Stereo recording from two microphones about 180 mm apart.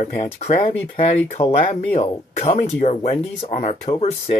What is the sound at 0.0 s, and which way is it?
Speech, 40° left (ahead or behind).